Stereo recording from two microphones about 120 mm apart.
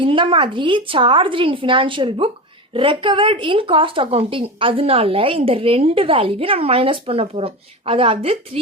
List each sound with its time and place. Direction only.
0.0 s speech: 45° right (ahead or behind)